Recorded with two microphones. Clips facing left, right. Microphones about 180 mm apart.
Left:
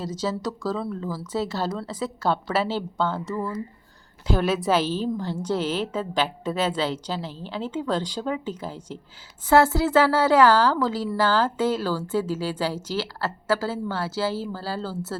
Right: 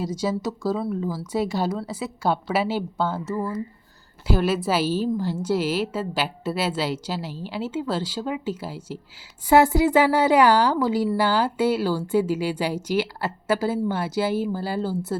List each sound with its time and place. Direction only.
0.0 s a woman's voice: 10° right (ahead or behind)